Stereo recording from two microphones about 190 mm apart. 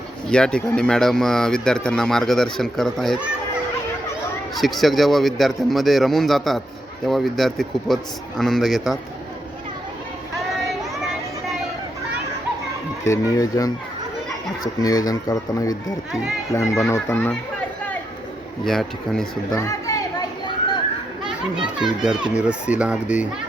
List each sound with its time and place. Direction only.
0.3 s speech: 5° left (ahead or behind)
4.5 s speech: centre (ahead or behind)
13.1 s speech: 20° left (ahead or behind)
18.6 s speech: centre (ahead or behind)
19.5 s chatter: 15° left (ahead or behind)
21.2 s speech: 5° right (ahead or behind)